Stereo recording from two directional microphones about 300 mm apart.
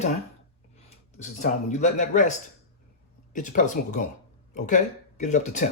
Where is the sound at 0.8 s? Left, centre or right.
Left.